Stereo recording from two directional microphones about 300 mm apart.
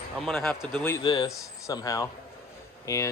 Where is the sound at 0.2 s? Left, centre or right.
Centre.